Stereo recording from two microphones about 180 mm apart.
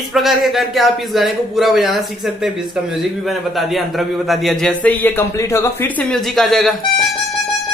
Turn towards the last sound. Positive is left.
turn(degrees=5)  # may be behind; listen again after turning